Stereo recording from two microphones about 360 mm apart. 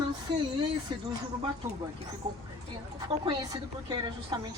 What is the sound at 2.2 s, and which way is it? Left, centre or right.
A woman's voice, centre.